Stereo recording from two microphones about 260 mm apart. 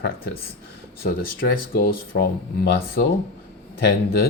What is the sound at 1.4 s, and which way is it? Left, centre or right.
Speech, left.